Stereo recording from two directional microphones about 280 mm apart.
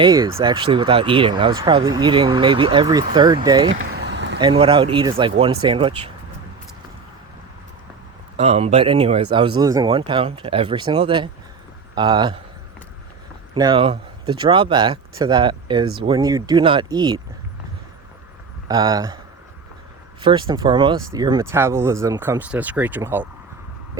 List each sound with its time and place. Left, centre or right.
0.0 s speech: centre
3.8 s vehicle: right
4.4 s speech: centre
8.4 s speech: right
13.5 s speech: centre
18.7 s speech: centre
20.2 s speech: centre